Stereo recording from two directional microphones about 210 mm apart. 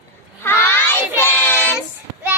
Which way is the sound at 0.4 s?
10° left (ahead or behind).